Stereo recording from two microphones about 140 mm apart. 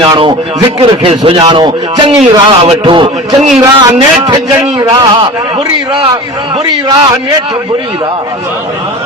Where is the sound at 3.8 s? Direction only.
30° right (ahead or behind).